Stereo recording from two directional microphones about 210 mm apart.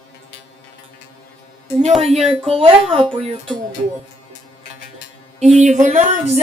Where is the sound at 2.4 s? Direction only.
25° right (ahead or behind).